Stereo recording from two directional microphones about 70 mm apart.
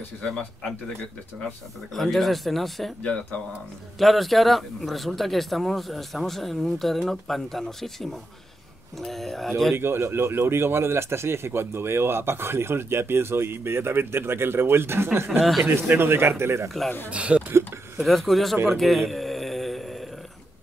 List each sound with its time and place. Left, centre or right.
0.2 s speech: centre
2.0 s speech: centre
3.0 s speech: centre
4.0 s speech: centre
9.8 s speech: right
17.1 s speech: centre
17.9 s speech: centre
18.7 s a sound: centre